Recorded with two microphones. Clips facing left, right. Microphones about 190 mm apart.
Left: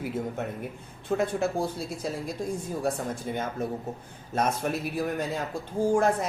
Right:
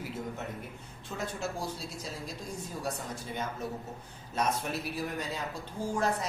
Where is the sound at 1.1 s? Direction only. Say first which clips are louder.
Left 10 dB; 55° left (ahead or behind).